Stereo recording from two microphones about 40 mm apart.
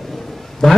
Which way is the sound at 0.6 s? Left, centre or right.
Centre.